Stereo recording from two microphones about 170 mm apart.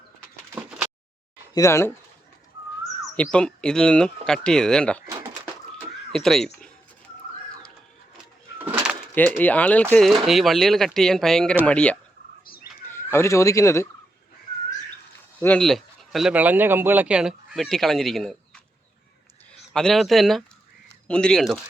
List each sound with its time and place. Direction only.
0.5 s a sound: 10° right (ahead or behind)
1.5 s speech: 15° left (ahead or behind)
3.3 s speech: 5° left (ahead or behind)
5.0 s pigeon: 20° right (ahead or behind)
6.1 s speech: centre (ahead or behind)
8.5 s bird: 10° right (ahead or behind)
9.4 s speech: 10° left (ahead or behind)
15.4 s speech: 10° left (ahead or behind)
19.7 s speech: centre (ahead or behind)